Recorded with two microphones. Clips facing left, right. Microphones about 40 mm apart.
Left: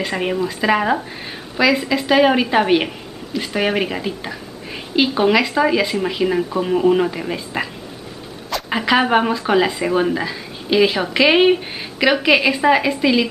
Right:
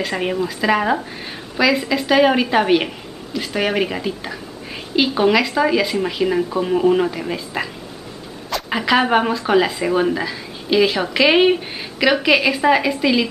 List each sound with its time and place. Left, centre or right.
0.0 s speech: centre